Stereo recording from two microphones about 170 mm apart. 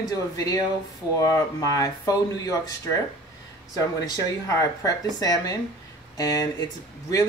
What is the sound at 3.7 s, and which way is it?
Speech, 20° left (ahead or behind).